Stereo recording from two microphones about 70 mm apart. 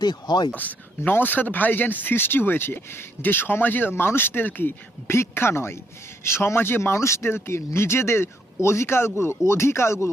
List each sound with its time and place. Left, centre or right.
0.0 s speech: left
0.5 s speech: left